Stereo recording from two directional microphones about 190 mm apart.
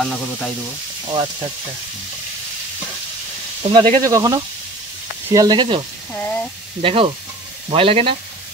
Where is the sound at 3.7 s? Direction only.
20° right (ahead or behind).